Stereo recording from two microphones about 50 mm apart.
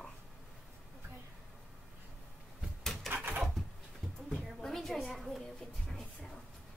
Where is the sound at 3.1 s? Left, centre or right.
Right.